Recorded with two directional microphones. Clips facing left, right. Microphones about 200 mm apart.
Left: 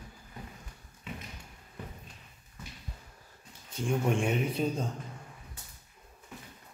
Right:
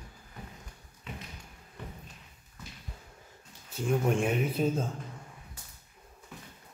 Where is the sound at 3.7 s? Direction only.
5° right (ahead or behind).